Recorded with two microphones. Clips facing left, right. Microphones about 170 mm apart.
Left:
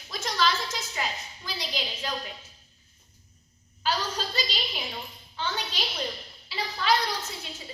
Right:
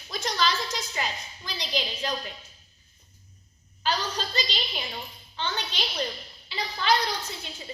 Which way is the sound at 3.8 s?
5° left (ahead or behind).